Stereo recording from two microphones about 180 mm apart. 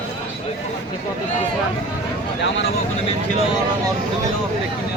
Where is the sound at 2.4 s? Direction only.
80° left.